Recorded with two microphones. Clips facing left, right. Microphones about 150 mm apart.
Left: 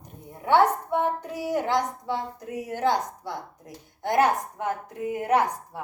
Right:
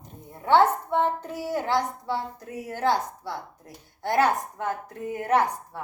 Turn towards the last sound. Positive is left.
turn(degrees=15)  # may be behind; listen again after turning